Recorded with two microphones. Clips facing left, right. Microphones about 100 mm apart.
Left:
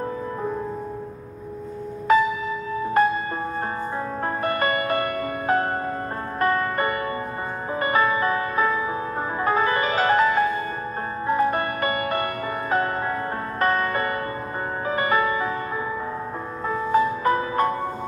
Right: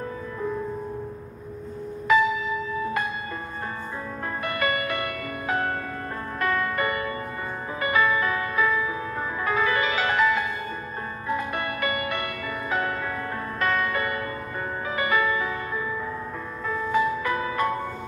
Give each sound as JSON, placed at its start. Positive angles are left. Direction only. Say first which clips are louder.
{"t": 2.1, "sound": "music", "louder": "left 2 dB", "side_deg": 40}
{"t": 4.4, "sound": "music", "louder": "left 2 dB", "side_deg": 40}
{"t": 13.6, "sound": "music", "louder": "left 3 dB", "side_deg": 40}
{"t": 16.6, "sound": "music", "louder": "left 3 dB", "side_deg": 40}